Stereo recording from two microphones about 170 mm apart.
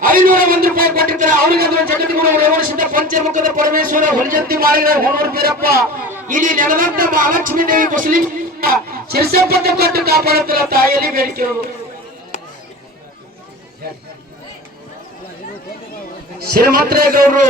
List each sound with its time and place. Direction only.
0.0 s a sound: 55° right (ahead or behind)
2.5 s speech: 55° right (ahead or behind)
16.4 s speech: 65° right (ahead or behind)